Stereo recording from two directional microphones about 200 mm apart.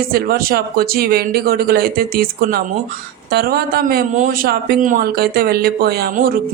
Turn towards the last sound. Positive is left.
turn(degrees=-45)  # may be behind; listen again after turning